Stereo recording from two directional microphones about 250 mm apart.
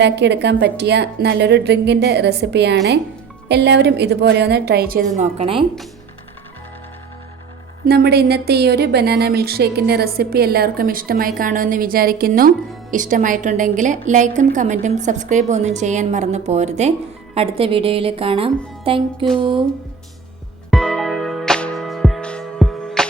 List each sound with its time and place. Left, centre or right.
0.0 s a woman's voice: right
7.9 s a woman's voice: right; by 19.6 s centre
20.7 s music: centre